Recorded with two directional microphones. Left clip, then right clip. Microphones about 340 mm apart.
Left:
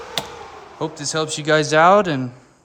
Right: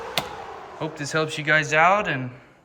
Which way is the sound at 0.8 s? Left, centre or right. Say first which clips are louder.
Left 3 dB; centre.